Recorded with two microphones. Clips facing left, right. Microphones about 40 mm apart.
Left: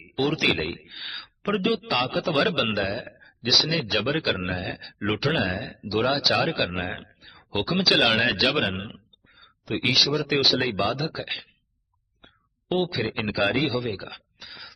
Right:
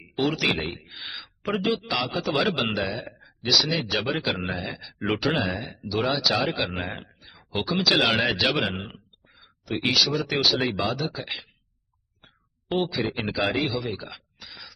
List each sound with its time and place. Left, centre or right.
0.0 s speech: centre
12.2 s a sound: centre
13.1 s a man's voice: centre